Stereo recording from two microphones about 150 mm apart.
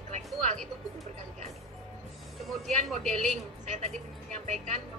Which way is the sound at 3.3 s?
50° right (ahead or behind).